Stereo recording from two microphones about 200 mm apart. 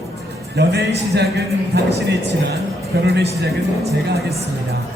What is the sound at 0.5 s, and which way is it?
A man's voice, 55° right (ahead or behind).